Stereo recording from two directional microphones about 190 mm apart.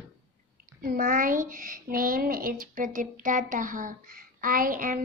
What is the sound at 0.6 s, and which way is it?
Speech, 50° right (ahead or behind).